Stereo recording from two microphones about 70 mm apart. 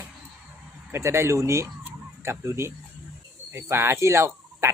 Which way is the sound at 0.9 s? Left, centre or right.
Right.